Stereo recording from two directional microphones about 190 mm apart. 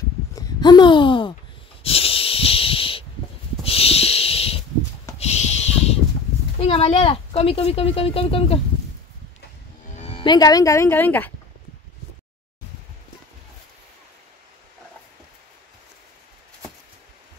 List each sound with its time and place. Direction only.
0.4 s a sound: 20° left (ahead or behind)
6.6 s speech: 30° left (ahead or behind)
9.9 s speech: 30° left (ahead or behind); by 11.3 s 10° left (ahead or behind)